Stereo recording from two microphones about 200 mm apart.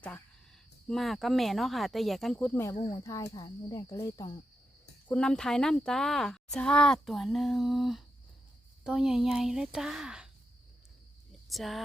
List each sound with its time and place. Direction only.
0.9 s speech: centre (ahead or behind)
2.7 s speech: 30° left (ahead or behind)
3.0 s speech: 15° left (ahead or behind)
5.0 s speech: 5° left (ahead or behind)
11.3 s cricket: centre (ahead or behind)